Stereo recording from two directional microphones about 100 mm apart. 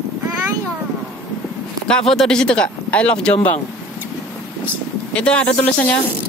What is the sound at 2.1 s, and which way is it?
Speech, 5° left (ahead or behind).